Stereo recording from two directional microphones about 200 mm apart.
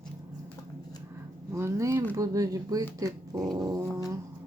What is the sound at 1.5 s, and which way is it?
Dog, 15° right (ahead or behind).